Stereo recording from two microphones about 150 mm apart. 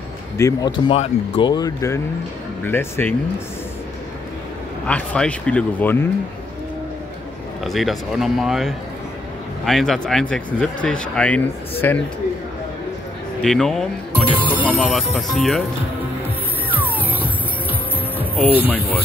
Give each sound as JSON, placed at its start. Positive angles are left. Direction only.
{"t": 0.4, "sound": "speech", "side_deg": 20}
{"t": 1.5, "sound": "speech", "side_deg": 25}
{"t": 4.8, "sound": "speech", "side_deg": 5}
{"t": 7.6, "sound": "speech", "side_deg": 0}
{"t": 13.4, "sound": "speech", "side_deg": 5}
{"t": 14.2, "sound": "speech", "side_deg": -10}
{"t": 16.7, "sound": "music", "side_deg": -10}
{"t": 18.3, "sound": "speech", "side_deg": 10}